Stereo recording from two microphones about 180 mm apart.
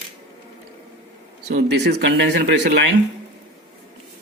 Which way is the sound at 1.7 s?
70° right (ahead or behind).